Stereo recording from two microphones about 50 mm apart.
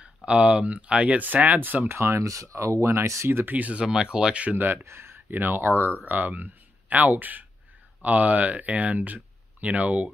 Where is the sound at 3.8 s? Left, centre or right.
Centre.